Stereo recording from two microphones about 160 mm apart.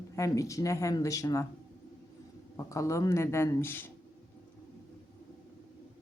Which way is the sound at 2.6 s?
20° left (ahead or behind).